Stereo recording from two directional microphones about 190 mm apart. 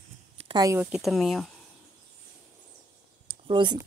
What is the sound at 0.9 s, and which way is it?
Speech, centre (ahead or behind).